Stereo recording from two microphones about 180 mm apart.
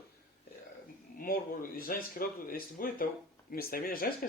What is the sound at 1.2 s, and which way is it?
Speech, 55° left (ahead or behind).